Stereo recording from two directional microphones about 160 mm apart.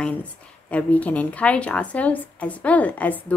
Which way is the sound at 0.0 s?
10° left (ahead or behind).